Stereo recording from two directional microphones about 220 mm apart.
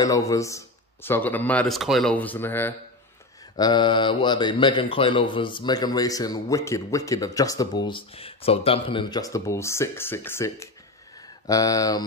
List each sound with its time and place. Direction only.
0.0 s speech: 15° left (ahead or behind)